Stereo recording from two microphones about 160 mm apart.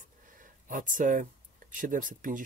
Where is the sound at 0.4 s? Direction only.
55° right (ahead or behind).